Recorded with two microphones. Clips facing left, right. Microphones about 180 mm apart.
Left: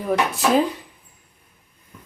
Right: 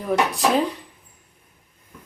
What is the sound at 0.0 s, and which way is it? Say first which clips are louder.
Speech: even; centre (ahead or behind).